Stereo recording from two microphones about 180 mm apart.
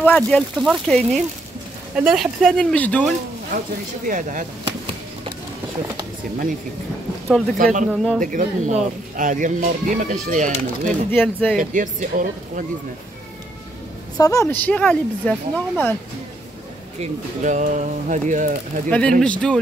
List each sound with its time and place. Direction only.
0.0 s speech: 5° left (ahead or behind)
4.0 s speech: 45° right (ahead or behind)
7.5 s speech: 50° right (ahead or behind)
7.9 s speech: centre (ahead or behind)
8.2 s speech: 45° right (ahead or behind)
11.1 s speech: 10° left (ahead or behind)
11.5 s speech: 45° right (ahead or behind)
14.1 s speech: 20° left (ahead or behind)
17.0 s speech: 40° right (ahead or behind)
18.9 s speech: 5° left (ahead or behind)